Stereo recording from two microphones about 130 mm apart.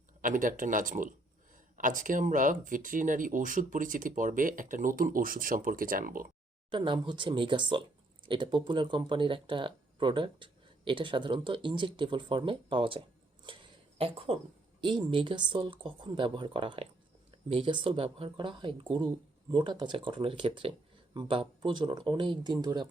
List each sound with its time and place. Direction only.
0.2 s speech: 90° right
6.7 s speech: 40° right (ahead or behind)
13.4 s a sound: 40° right (ahead or behind)
14.8 s speech: 40° right (ahead or behind)